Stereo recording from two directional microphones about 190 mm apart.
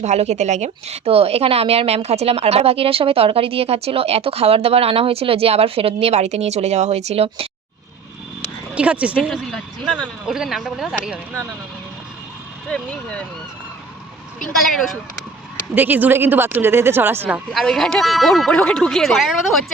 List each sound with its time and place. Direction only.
0.0 s speech: 35° right (ahead or behind)
8.7 s speech: 5° right (ahead or behind)
12.6 s speech: 5° left (ahead or behind)
14.5 s speech: centre (ahead or behind)